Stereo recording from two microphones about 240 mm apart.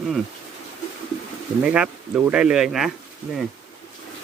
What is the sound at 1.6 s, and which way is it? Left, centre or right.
Speech, centre.